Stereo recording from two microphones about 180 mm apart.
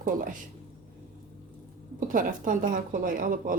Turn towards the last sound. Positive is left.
turn(degrees=-50)  # may be behind; listen again after turning